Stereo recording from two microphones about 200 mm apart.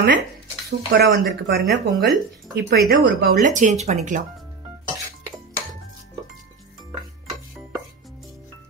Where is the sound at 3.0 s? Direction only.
55° right (ahead or behind).